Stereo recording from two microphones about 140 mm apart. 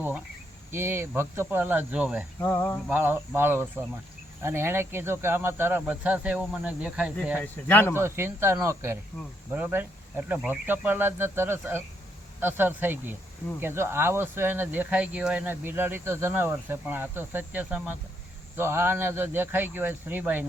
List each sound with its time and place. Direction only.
0.7 s speech: 15° right (ahead or behind)
2.4 s speech: 15° left (ahead or behind)
2.9 s speech: 15° right (ahead or behind)
7.4 s speech: 15° left (ahead or behind)
7.9 s speech: 15° right (ahead or behind)